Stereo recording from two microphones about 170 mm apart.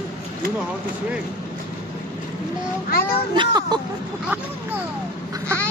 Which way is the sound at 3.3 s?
25° right (ahead or behind).